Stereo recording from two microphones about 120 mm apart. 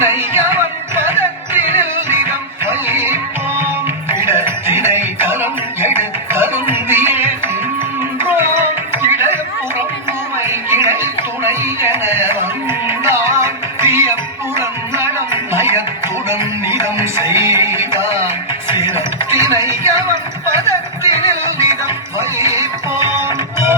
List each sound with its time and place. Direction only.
0.0 s music: 20° right (ahead or behind)
4.3 s music: 20° right (ahead or behind)
9.0 s a sound: 20° right (ahead or behind)
12.9 s music: 20° right (ahead or behind)